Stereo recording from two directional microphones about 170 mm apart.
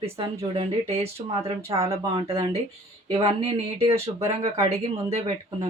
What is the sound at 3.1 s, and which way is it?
Speech, 30° right (ahead or behind).